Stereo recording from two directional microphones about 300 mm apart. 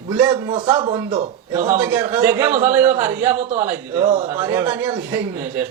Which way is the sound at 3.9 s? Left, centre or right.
Right.